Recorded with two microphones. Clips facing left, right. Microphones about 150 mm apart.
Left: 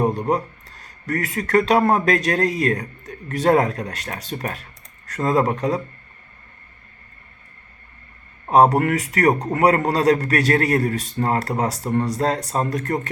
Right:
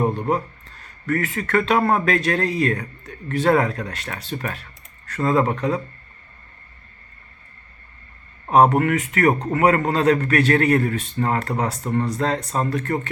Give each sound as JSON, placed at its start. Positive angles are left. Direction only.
{"t": 0.1, "sound": "speech", "side_deg": 40}
{"t": 8.5, "sound": "speech", "side_deg": 35}